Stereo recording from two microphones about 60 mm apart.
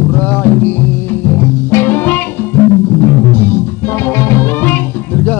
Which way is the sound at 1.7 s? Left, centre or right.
Left.